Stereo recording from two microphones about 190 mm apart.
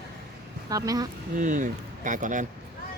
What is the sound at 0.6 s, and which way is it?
Speech, 20° right (ahead or behind).